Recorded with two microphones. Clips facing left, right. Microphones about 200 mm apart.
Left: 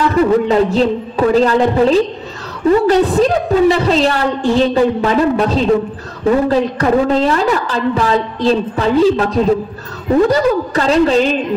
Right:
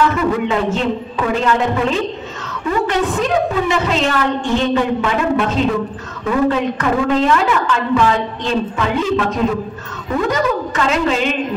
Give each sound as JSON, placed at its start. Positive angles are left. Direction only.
{"t": 0.1, "sound": "a woman's voice", "side_deg": 35}